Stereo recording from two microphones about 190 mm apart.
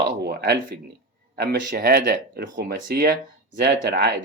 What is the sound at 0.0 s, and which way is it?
Speech, 60° right (ahead or behind).